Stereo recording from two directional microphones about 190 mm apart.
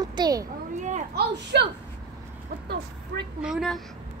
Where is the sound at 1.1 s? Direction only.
65° right (ahead or behind).